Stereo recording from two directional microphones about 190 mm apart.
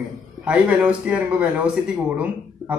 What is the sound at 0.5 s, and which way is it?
Speech, 5° right (ahead or behind).